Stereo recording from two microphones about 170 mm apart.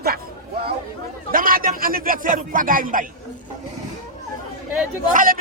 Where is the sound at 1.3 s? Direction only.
55° right (ahead or behind).